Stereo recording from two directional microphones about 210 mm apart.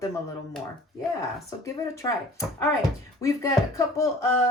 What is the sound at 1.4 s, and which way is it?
Speech, 15° left (ahead or behind).